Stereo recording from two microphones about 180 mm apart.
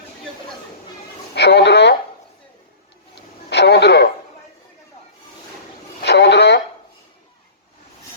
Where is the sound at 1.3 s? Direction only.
70° left (ahead or behind).